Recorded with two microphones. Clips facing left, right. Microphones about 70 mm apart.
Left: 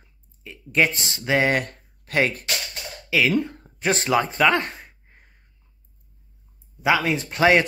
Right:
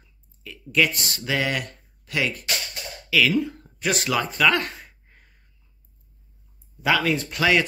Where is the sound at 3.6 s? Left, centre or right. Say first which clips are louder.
Left 2 dB; left.